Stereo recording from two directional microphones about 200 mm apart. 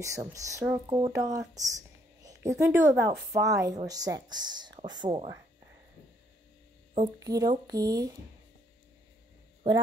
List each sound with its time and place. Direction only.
0.0 s speech: 15° right (ahead or behind)
7.2 s speech: 15° right (ahead or behind)
9.6 s speech: 25° right (ahead or behind)